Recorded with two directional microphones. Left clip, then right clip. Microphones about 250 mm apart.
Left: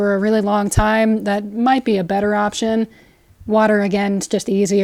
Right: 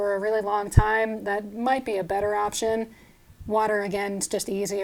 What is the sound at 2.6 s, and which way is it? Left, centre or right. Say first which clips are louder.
Speech: left 6 dB; left.